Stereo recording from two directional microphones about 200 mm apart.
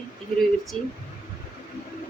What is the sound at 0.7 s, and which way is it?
Speech, 30° right (ahead or behind).